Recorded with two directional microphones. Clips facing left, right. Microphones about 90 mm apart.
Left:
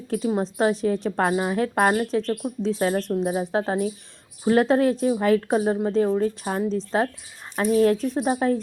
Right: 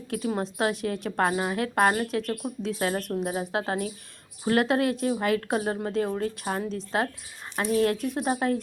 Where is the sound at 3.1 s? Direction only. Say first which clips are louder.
Left 5 dB; 10° left (ahead or behind).